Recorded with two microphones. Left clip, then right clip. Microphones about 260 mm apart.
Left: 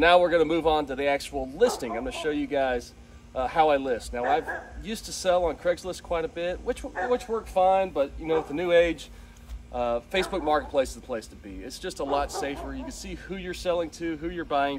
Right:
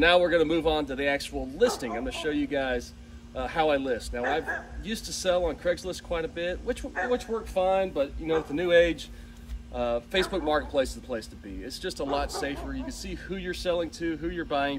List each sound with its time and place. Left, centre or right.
0.0 s speech: centre